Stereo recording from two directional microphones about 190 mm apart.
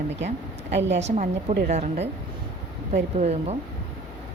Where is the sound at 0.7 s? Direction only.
70° right (ahead or behind).